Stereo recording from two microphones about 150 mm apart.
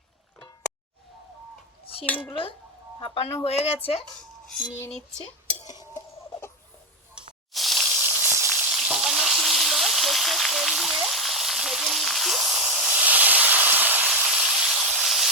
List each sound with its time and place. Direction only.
2.3 s speech: 35° left (ahead or behind)
7.5 s snake: centre (ahead or behind)
8.7 s frying: 5° right (ahead or behind)